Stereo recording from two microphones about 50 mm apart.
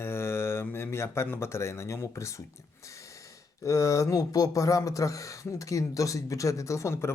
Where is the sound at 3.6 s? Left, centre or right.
Left.